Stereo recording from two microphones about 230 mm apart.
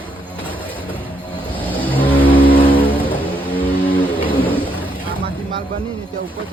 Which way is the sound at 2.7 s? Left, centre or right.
Centre.